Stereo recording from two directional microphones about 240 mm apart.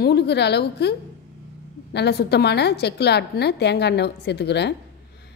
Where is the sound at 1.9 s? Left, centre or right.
Left.